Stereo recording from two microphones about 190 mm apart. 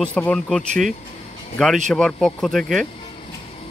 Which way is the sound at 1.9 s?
5° left (ahead or behind).